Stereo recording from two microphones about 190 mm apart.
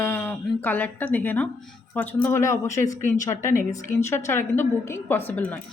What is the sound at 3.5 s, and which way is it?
Speech, 45° left (ahead or behind).